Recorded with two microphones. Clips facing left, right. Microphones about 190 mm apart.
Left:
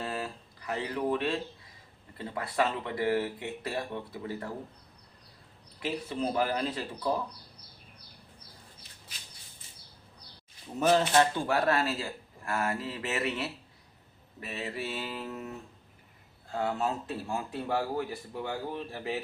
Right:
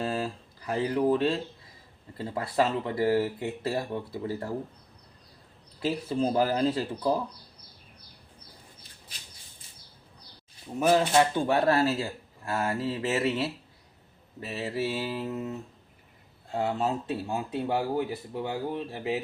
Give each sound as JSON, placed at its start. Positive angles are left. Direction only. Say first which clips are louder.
{"t": 0.0, "sound": "a sound", "louder": "right 5 dB", "side_deg": -30}
{"t": 2.1, "sound": "speech", "louder": "right 4 dB", "side_deg": -30}
{"t": 5.8, "sound": "speech", "louder": "right 5 dB", "side_deg": -35}
{"t": 10.8, "sound": "speech", "louder": "right 2 dB", "side_deg": -10}